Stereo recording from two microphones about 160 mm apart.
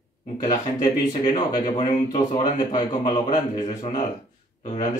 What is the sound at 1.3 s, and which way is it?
A man's voice, 25° left (ahead or behind).